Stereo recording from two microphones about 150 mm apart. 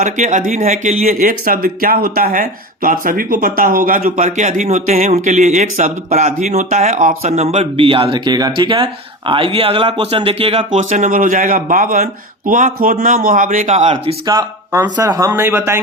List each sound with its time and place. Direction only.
0.0 s speech: 55° right (ahead or behind)
14.3 s speech: 30° right (ahead or behind)